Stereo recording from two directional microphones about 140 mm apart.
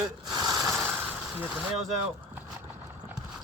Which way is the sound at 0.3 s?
30° right (ahead or behind).